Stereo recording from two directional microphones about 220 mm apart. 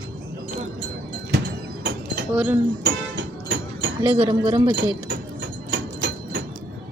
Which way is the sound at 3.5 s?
55° right (ahead or behind).